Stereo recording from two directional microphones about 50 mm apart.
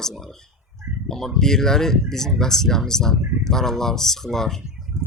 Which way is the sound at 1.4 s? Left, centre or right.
Centre.